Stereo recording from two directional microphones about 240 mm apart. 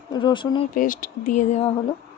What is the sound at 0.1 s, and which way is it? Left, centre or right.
Speech, centre.